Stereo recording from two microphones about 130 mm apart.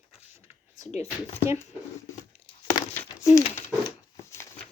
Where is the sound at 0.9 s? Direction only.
55° left (ahead or behind).